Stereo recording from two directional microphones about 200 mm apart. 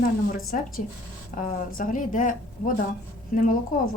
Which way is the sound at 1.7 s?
45° left (ahead or behind).